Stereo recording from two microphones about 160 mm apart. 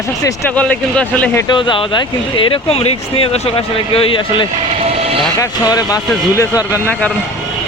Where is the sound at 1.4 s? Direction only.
30° left (ahead or behind).